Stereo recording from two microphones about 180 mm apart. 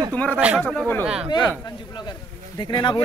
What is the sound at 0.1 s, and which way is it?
Speech, 10° left (ahead or behind).